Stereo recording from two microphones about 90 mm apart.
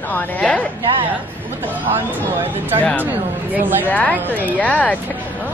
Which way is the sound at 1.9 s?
25° right (ahead or behind).